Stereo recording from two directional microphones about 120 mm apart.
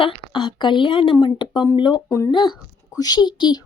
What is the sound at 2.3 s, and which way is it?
A woman's voice, 40° left (ahead or behind).